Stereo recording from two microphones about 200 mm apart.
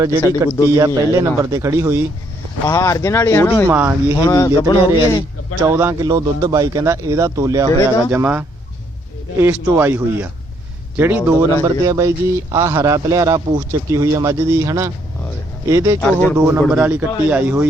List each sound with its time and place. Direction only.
0.4 s a man's voice: 15° right (ahead or behind)
2.6 s speech: 15° left (ahead or behind)
3.7 s a man's voice: 10° right (ahead or behind)
4.2 s speech: 15° left (ahead or behind)
5.6 s a man's voice: 10° right (ahead or behind)
7.7 s speech: 15° left (ahead or behind)
8.1 s a man's voice: 10° right (ahead or behind)
16.0 s speech: 10° left (ahead or behind)
16.4 s a man's voice: 10° right (ahead or behind)